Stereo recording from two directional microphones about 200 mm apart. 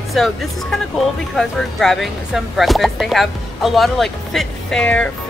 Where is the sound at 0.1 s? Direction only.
Centre (ahead or behind).